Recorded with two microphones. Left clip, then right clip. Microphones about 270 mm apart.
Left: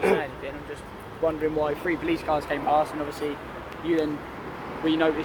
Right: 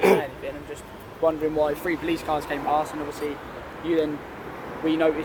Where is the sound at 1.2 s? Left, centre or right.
Right.